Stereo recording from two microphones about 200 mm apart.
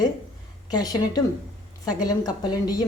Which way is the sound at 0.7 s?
20° left (ahead or behind).